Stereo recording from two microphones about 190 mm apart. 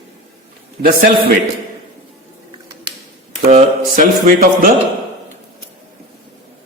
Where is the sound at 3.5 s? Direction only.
45° right (ahead or behind).